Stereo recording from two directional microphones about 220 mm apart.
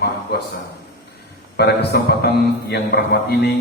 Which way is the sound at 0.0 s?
45° left (ahead or behind).